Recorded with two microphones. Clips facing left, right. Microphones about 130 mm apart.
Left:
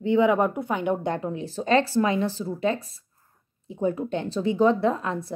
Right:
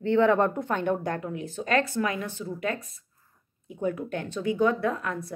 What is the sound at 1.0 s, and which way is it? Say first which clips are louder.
A woman's voice: left 3 dB; 25° left (ahead or behind).